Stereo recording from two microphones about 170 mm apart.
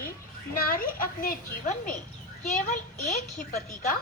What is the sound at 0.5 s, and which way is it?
A woman's voice, 55° left (ahead or behind).